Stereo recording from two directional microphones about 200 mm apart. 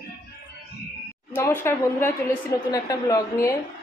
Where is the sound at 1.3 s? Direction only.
10° left (ahead or behind).